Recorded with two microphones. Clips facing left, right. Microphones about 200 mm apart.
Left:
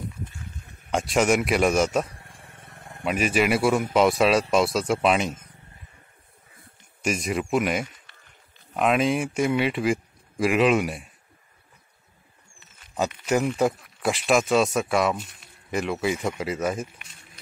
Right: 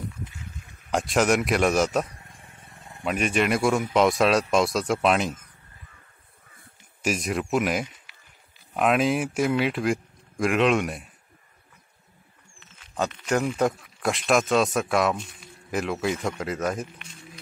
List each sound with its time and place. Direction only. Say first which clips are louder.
0.8 s speech: even; centre (ahead or behind)
2.6 s vehicle: left 3 dB; 60° left (ahead or behind)
3.0 s speech: left 1 dB; 5° left (ahead or behind)
7.0 s speech: even; centre (ahead or behind)
12.9 s speech: left 1 dB; 5° left (ahead or behind)